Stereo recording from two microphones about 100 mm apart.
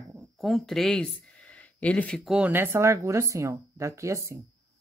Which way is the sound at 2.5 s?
25° right (ahead or behind).